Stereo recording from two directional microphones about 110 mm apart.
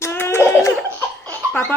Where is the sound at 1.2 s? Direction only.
20° left (ahead or behind).